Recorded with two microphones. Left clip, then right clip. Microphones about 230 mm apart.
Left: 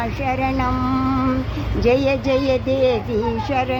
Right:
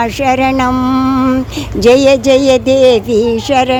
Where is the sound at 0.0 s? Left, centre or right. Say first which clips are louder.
Right 10 dB; right.